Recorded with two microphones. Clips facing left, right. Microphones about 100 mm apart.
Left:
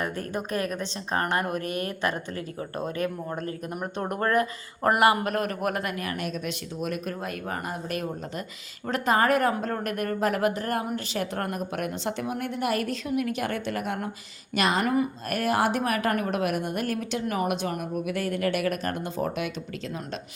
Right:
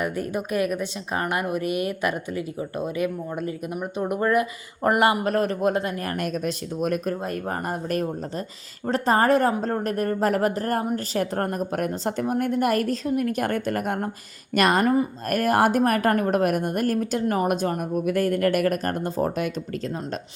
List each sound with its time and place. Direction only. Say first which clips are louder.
0.0 s speech: right 4 dB; 10° right (ahead or behind)
1.5 s speech: right 4 dB; 10° right (ahead or behind)
4.9 s a man's voice: right 1 dB; 25° right (ahead or behind)
6.1 s a woman's voice: right 5 dB; 45° right (ahead or behind)